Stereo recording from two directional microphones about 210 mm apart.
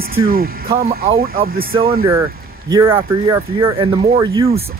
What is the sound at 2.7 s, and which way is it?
Speech, 20° right (ahead or behind).